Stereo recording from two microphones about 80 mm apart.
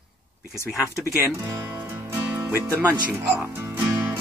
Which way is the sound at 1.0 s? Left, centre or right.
Right.